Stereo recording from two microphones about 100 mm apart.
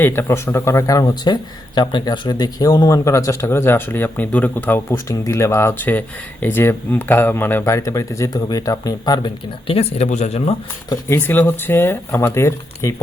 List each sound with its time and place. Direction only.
0.0 s speech: 20° left (ahead or behind); by 9.3 s 40° left (ahead or behind)
9.6 s speech: 80° left
11.1 s speech: 20° left (ahead or behind)